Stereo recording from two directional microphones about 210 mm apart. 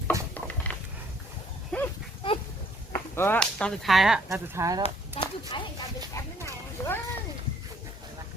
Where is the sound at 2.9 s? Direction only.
10° left (ahead or behind).